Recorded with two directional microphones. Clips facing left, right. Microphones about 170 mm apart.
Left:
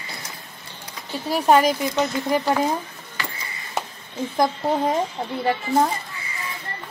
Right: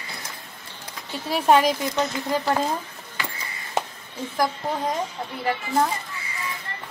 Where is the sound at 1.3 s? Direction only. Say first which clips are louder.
Left 1 dB; centre (ahead or behind).